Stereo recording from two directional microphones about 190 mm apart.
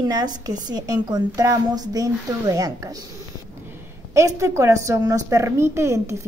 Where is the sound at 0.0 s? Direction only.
20° right (ahead or behind).